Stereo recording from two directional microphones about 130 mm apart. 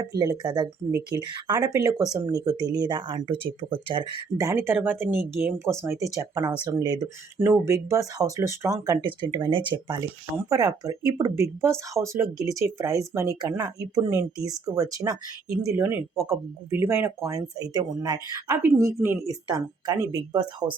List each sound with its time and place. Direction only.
0.0 s speech: 30° right (ahead or behind)
4.4 s speech: 20° right (ahead or behind)
7.3 s speech: 20° right (ahead or behind)
9.0 s speech: 35° right (ahead or behind)
10.3 s speech: 25° right (ahead or behind)
17.2 s speech: 30° right (ahead or behind)